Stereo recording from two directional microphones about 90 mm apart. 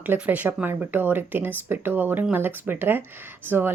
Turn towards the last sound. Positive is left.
turn(degrees=-25)  # may be behind; listen again after turning